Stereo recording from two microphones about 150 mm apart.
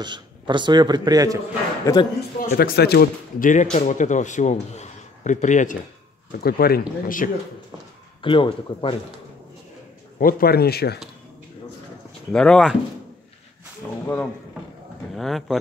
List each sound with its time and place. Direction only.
0.0 s a man's voice: 30° right (ahead or behind)
1.9 s speech: 20° left (ahead or behind)
2.5 s a man's voice: 90° left; by 5.8 s 55° left (ahead or behind)
6.4 s speech: 90° left; by 7.2 s 70° left (ahead or behind)
8.2 s speech: 35° left (ahead or behind)
10.1 s a man's voice: 80° left
12.3 s speech: 5° left (ahead or behind)
14.0 s speech: 15° left (ahead or behind)
15.1 s speech: centre (ahead or behind)